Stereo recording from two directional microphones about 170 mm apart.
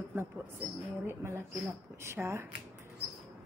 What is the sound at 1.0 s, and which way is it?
A man's voice, 15° right (ahead or behind).